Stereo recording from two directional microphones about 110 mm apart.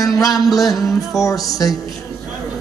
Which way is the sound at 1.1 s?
30° left (ahead or behind).